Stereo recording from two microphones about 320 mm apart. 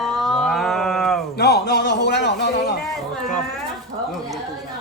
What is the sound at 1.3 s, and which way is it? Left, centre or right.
A man's voice, left.